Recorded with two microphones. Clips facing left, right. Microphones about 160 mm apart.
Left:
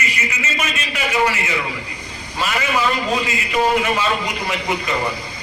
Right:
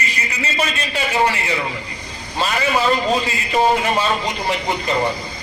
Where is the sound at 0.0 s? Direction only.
35° right (ahead or behind).